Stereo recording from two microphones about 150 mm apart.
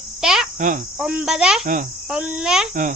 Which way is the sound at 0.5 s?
60° right (ahead or behind).